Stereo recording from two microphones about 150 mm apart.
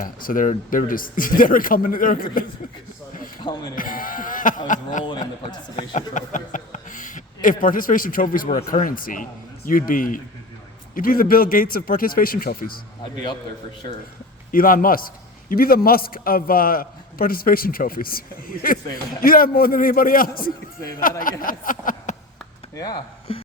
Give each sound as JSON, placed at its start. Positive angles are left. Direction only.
{"t": 0.0, "sound": "a man's voice", "side_deg": 65}
{"t": 3.8, "sound": "a man's voice", "side_deg": 65}
{"t": 14.5, "sound": "a man's voice", "side_deg": 70}
{"t": 22.7, "sound": "speech", "side_deg": 25}